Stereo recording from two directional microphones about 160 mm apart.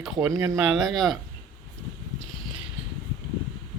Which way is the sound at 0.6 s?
Centre (ahead or behind).